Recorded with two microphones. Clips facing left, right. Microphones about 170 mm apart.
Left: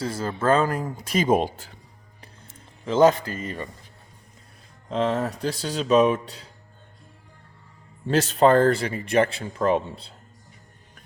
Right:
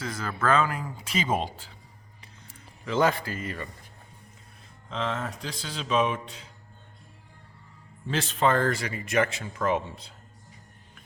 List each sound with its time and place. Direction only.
0.0 s speech: 30° left (ahead or behind)
0.6 s speech: 45° left (ahead or behind)
2.8 s speech: 25° left (ahead or behind)
4.9 s speech: 45° left (ahead or behind)
8.0 s speech: 40° left (ahead or behind)